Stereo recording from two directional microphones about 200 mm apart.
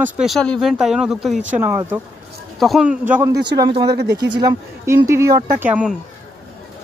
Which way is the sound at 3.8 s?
55° right (ahead or behind).